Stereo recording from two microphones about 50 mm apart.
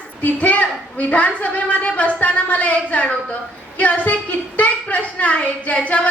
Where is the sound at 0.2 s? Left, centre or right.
Left.